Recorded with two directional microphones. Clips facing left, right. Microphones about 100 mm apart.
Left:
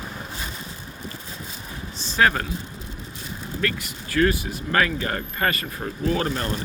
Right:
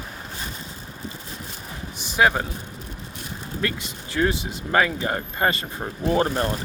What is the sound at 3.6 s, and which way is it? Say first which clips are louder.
Speech: even; 20° right (ahead or behind).